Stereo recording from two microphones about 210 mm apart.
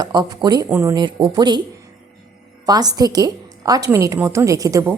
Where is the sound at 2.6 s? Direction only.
20° right (ahead or behind).